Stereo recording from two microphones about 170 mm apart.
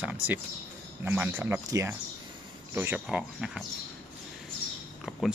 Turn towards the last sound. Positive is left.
turn(degrees=0)  # may be behind; listen again after turning